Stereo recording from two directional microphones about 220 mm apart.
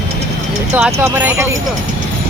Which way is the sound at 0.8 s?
5° right (ahead or behind).